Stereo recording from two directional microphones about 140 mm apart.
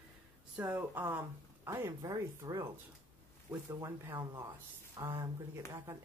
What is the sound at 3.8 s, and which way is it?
A woman's voice, 20° right (ahead or behind).